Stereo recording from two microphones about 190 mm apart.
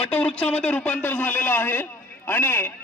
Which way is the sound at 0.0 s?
10° left (ahead or behind).